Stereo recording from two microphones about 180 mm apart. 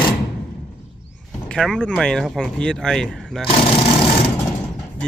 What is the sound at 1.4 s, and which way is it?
Speech, 5° left (ahead or behind).